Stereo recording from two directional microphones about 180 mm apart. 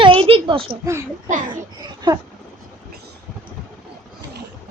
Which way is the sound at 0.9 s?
15° right (ahead or behind).